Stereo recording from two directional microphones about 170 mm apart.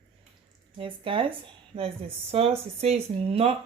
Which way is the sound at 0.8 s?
30° right (ahead or behind).